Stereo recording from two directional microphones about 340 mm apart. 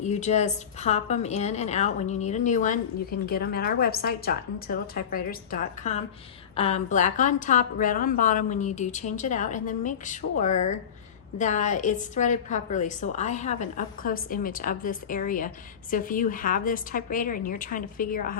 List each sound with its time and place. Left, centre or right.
0.0 s a woman's voice: left